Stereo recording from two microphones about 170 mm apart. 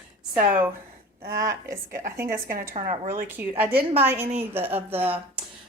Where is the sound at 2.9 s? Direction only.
45° right (ahead or behind).